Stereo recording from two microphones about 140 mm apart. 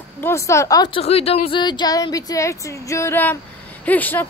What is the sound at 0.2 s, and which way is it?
Music, 20° left (ahead or behind).